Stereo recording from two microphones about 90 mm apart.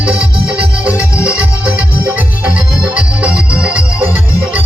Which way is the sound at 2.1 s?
15° right (ahead or behind).